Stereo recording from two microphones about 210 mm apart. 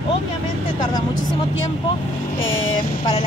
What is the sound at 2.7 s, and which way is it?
Speech, 25° left (ahead or behind).